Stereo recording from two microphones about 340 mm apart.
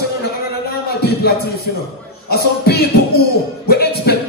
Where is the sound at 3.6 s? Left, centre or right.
Left.